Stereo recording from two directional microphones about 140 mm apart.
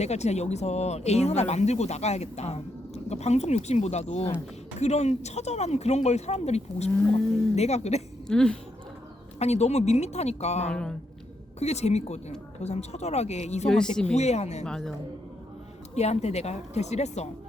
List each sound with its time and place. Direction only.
0.0 s speech: 50° left (ahead or behind)
8.3 s a woman's voice: 5° left (ahead or behind)
9.4 s speech: 50° left (ahead or behind)
10.7 s a woman's voice: 5° left (ahead or behind)
11.6 s speech: 50° left (ahead or behind)
13.7 s a woman's voice: 5° left (ahead or behind)
14.2 s speech: 50° left (ahead or behind)
14.6 s a woman's voice: 5° left (ahead or behind)
16.0 s speech: 50° left (ahead or behind)